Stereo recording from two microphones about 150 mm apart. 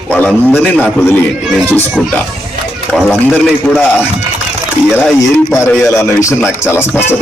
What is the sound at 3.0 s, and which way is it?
A man's voice, 10° left (ahead or behind).